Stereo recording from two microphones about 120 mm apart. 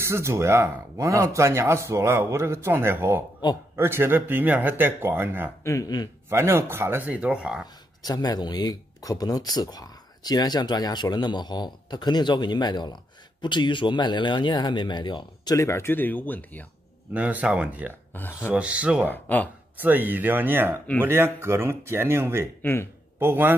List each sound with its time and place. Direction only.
0.0 s speech: 25° right (ahead or behind)
5.6 s speech: 25° left (ahead or behind)
6.2 s speech: 20° right (ahead or behind)
7.6 s speech: 35° left (ahead or behind)
15.5 s speech: 25° left (ahead or behind)
17.1 s speech: 10° right (ahead or behind)
18.1 s speech: 15° left (ahead or behind)
18.5 s speech: 10° right (ahead or behind)
19.1 s speech: 15° left (ahead or behind)
19.8 s speech: 15° right (ahead or behind)
22.6 s speech: 20° left (ahead or behind)
23.1 s speech: 15° right (ahead or behind)